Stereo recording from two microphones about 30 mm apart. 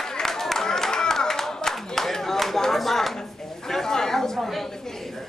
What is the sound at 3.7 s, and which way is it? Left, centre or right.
Chatter, centre.